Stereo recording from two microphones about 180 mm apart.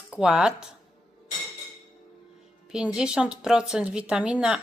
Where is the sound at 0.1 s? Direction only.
5° right (ahead or behind).